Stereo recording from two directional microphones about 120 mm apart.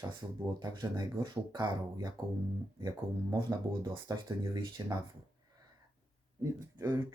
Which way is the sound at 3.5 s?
30° right (ahead or behind).